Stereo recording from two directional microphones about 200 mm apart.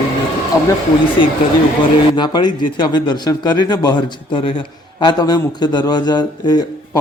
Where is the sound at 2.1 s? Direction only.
20° left (ahead or behind).